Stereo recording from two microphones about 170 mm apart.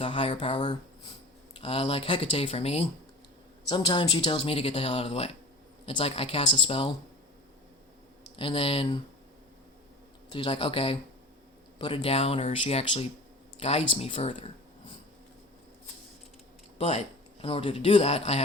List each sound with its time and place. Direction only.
0.0 s speech: 30° left (ahead or behind)
3.7 s speech: 25° left (ahead or behind)
8.4 s speech: 30° left (ahead or behind)
10.3 s speech: 30° left (ahead or behind)
16.7 s speech: 35° left (ahead or behind)